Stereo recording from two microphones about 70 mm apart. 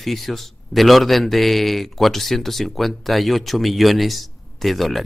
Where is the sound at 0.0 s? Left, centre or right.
Centre.